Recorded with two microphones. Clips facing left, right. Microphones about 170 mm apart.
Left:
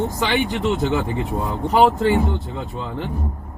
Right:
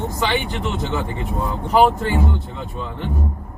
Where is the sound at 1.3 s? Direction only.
20° left (ahead or behind).